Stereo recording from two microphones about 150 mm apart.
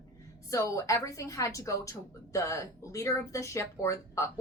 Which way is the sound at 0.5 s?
20° left (ahead or behind).